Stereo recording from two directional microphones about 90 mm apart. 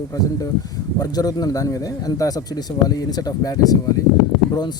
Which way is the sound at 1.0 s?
45° left (ahead or behind).